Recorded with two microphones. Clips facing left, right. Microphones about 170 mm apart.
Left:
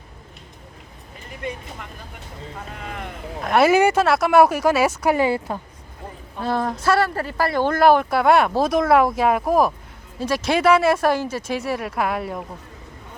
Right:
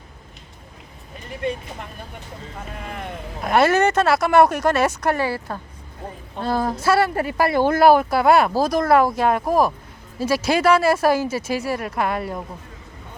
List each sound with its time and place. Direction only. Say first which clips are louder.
3.4 s speech: left 1 dB; centre (ahead or behind)
5.2 s a woman's voice: left 4 dB; 20° left (ahead or behind)
6.4 s speech: right 1 dB; centre (ahead or behind)